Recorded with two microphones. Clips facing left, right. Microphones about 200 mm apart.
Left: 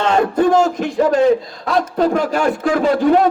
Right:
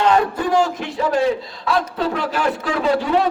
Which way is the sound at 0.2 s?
45° left (ahead or behind).